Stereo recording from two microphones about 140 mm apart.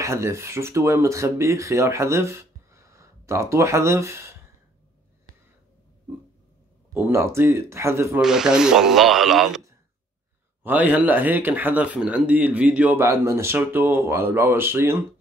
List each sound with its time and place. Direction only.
0.0 s speech: 20° right (ahead or behind)
6.9 s speech: 15° right (ahead or behind)
8.2 s speech: 5° right (ahead or behind)
10.6 s speech: 10° right (ahead or behind)